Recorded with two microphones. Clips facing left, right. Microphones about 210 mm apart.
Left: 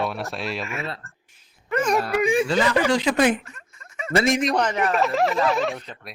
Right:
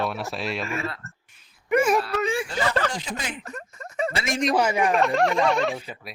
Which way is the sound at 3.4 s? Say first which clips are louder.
Right 10 dB; 40° right (ahead or behind).